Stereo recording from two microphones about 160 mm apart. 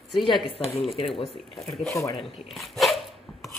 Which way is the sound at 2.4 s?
Centre (ahead or behind).